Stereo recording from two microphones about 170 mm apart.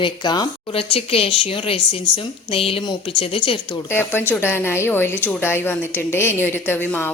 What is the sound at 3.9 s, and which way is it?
A woman's voice, 15° left (ahead or behind).